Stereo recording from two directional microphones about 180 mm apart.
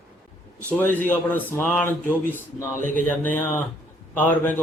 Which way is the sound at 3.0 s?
10° left (ahead or behind).